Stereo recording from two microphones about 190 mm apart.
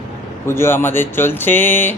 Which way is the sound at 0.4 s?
15° left (ahead or behind).